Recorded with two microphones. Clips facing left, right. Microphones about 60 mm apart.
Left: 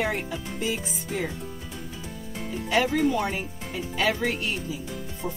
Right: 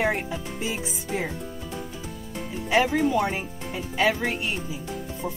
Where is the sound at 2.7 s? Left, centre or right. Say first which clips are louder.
Right 1 dB; centre.